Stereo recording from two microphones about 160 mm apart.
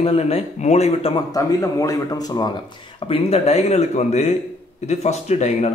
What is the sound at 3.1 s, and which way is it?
Speech, 40° left (ahead or behind).